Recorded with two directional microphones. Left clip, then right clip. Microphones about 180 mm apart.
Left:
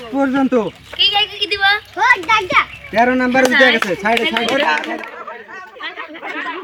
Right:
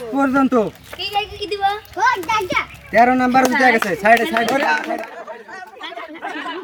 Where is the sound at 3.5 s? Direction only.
40° right (ahead or behind).